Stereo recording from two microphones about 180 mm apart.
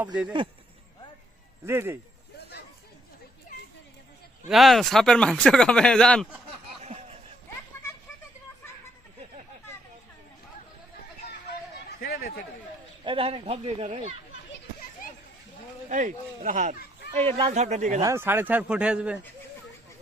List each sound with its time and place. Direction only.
1.6 s speech: 15° right (ahead or behind)
4.4 s speech: centre (ahead or behind)
6.8 s a sound: 35° right (ahead or behind)
11.9 s a sound: 60° left (ahead or behind)
13.1 s speech: 30° right (ahead or behind)
15.9 s speech: 45° right (ahead or behind)
17.2 s speech: 30° right (ahead or behind)
18.0 s speech: 15° right (ahead or behind)